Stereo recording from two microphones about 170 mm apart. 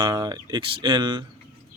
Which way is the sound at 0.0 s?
25° right (ahead or behind).